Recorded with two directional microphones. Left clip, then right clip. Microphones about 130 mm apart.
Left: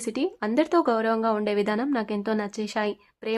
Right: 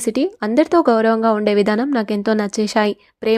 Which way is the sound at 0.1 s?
40° right (ahead or behind).